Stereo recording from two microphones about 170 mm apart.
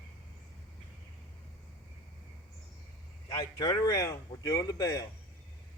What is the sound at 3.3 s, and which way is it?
A man's voice, 20° left (ahead or behind).